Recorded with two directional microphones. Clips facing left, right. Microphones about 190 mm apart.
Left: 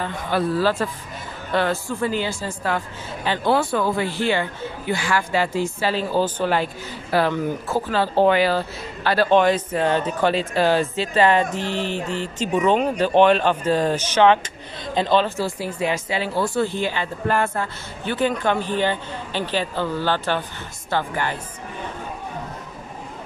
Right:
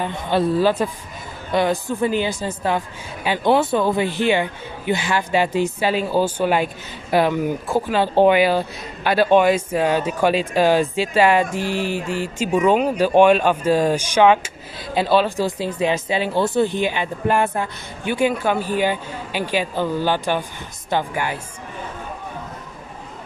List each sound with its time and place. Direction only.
0.0 s speech: 25° right (ahead or behind)